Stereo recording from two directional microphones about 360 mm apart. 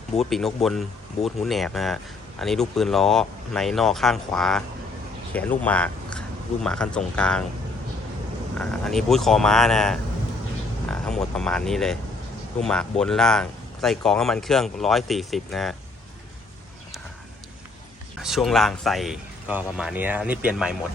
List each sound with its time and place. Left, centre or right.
0.2 s speech: centre
8.5 s speech: centre
11.0 s speech: centre
18.2 s speech: centre